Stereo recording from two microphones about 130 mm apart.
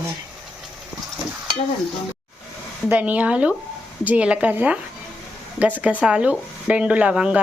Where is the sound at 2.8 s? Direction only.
10° right (ahead or behind).